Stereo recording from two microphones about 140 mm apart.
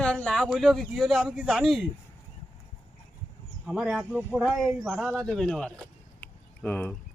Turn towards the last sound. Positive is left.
turn(degrees=10)  # may be behind; listen again after turning